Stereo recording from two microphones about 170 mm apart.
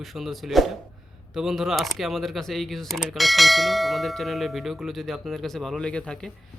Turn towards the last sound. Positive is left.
turn(degrees=5)  # may be behind; listen again after turning